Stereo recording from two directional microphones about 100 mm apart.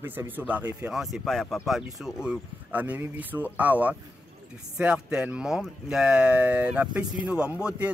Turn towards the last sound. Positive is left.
turn(degrees=-10)  # may be behind; listen again after turning